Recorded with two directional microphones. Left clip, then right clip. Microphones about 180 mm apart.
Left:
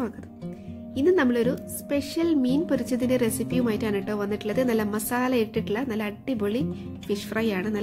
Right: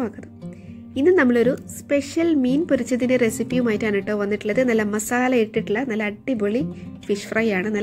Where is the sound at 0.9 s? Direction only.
20° right (ahead or behind).